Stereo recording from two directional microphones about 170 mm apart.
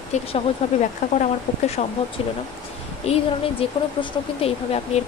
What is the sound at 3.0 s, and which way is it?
Speech, 35° left (ahead or behind).